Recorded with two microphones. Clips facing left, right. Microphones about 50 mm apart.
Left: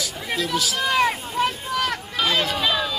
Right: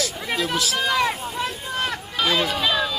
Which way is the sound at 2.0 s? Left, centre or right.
Centre.